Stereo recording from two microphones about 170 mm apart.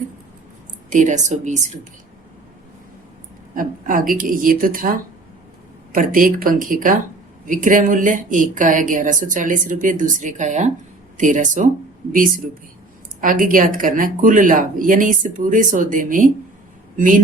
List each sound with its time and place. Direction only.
0.9 s speech: 45° right (ahead or behind)
3.5 s speech: 55° right (ahead or behind)
13.2 s speech: 55° right (ahead or behind)